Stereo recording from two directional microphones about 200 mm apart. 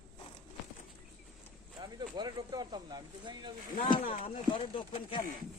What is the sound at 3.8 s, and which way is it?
Speech, 25° left (ahead or behind).